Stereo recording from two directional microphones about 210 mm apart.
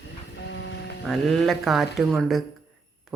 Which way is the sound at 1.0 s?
Centre (ahead or behind).